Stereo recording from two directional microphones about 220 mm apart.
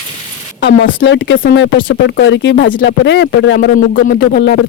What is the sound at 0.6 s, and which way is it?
Speech, 60° left (ahead or behind).